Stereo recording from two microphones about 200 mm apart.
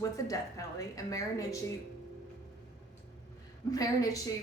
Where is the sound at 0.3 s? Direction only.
15° left (ahead or behind).